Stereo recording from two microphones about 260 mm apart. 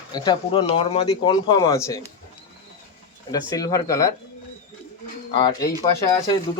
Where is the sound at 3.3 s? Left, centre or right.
Centre.